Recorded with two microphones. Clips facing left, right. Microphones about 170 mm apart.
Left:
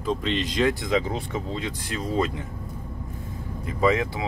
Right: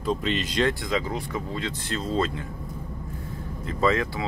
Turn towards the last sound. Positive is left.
turn(degrees=15)  # may be behind; listen again after turning